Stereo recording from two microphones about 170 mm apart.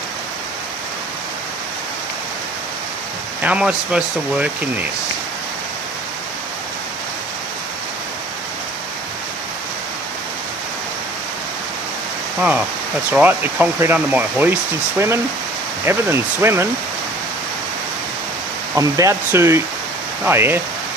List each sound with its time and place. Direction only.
3.4 s speech: 5° right (ahead or behind)
12.4 s speech: 5° right (ahead or behind)
18.7 s speech: 20° right (ahead or behind)